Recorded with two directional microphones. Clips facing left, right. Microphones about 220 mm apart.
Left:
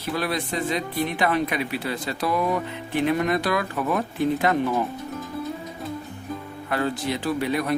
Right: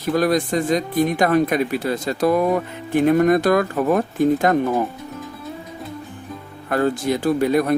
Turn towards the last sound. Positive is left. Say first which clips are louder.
# right 7 dB
turn(degrees=-45)  # may be behind; listen again after turning